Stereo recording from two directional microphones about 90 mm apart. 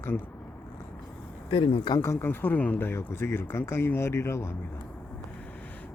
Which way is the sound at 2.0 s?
30° left (ahead or behind).